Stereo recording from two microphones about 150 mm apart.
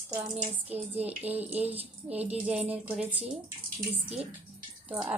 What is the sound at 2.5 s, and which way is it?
Speech, 10° right (ahead or behind).